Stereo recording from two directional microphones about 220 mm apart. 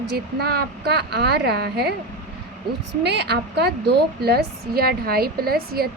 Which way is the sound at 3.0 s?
50° right (ahead or behind).